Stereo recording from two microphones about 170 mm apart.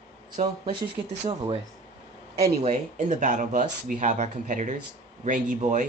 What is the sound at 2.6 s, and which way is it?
Speech, 45° right (ahead or behind).